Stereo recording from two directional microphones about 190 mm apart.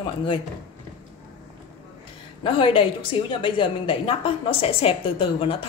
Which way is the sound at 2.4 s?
25° left (ahead or behind).